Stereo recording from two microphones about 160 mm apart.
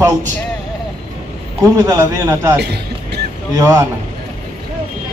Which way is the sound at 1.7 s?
20° right (ahead or behind).